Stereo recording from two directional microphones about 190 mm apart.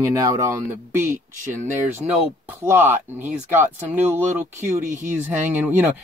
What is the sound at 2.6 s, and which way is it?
Speech, 10° right (ahead or behind).